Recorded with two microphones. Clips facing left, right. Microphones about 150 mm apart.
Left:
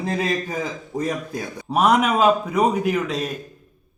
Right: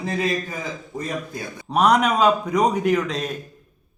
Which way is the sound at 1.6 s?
5° left (ahead or behind).